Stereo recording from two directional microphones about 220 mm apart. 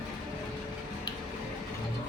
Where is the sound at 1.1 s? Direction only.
20° left (ahead or behind).